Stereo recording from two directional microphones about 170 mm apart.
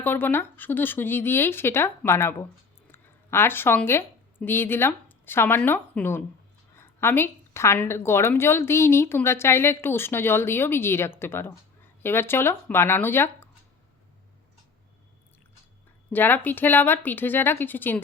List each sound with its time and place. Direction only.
0.0 s a woman's voice: 10° left (ahead or behind)
16.1 s a woman's voice: 10° left (ahead or behind)